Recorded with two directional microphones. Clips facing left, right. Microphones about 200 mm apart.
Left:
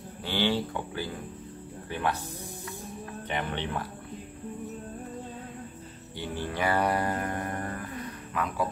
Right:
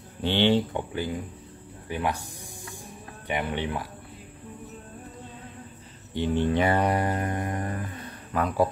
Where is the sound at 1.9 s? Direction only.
15° right (ahead or behind).